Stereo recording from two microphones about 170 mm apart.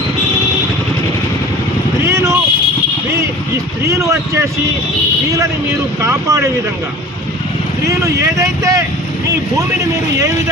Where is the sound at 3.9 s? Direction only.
15° right (ahead or behind).